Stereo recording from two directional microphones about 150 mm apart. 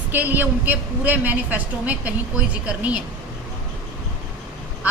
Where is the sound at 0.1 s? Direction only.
15° right (ahead or behind).